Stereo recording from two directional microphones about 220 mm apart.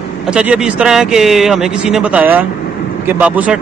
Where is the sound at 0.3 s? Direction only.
5° right (ahead or behind).